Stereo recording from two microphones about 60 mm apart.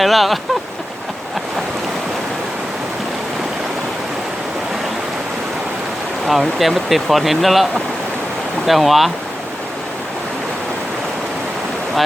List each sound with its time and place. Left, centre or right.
0.0 s speech: centre
6.2 s speech: centre